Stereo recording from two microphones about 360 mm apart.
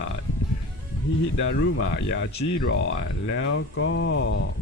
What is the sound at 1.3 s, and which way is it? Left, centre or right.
Speech, left.